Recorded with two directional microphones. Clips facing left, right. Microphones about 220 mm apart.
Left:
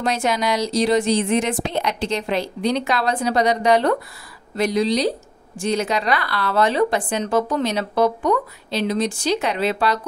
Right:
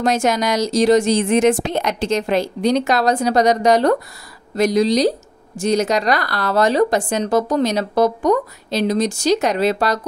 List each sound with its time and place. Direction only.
0.0 s speech: 45° right (ahead or behind)